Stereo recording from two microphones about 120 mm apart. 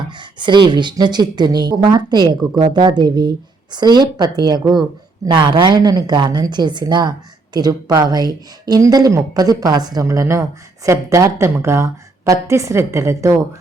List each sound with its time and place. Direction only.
0.1 s a woman's voice: 40° right (ahead or behind); by 13.3 s 25° right (ahead or behind)